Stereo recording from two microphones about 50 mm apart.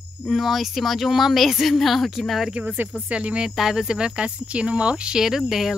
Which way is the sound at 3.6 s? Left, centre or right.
Centre.